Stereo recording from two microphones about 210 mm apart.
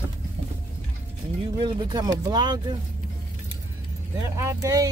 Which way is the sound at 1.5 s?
20° right (ahead or behind).